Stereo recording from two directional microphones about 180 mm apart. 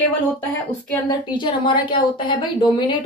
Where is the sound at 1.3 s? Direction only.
25° left (ahead or behind).